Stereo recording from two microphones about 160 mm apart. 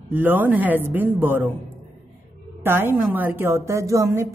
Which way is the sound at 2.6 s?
15° right (ahead or behind).